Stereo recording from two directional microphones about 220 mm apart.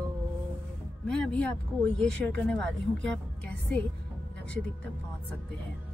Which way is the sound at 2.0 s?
5° left (ahead or behind).